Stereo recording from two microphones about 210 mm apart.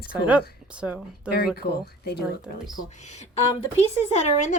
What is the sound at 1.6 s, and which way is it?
Speech, 50° left (ahead or behind).